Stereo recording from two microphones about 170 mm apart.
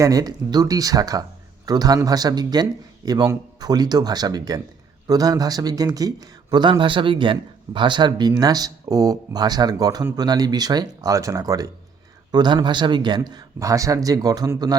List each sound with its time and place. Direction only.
0.0 s speech: 20° right (ahead or behind)